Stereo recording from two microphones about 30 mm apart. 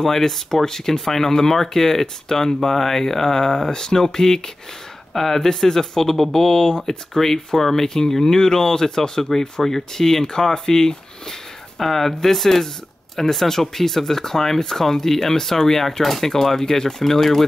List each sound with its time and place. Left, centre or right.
0.0 s speech: centre